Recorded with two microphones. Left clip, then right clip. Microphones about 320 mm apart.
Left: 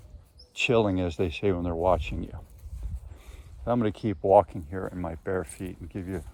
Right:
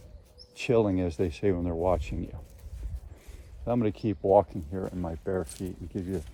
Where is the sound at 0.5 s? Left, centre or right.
Left.